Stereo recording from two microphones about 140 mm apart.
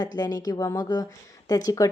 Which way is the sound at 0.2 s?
25° left (ahead or behind).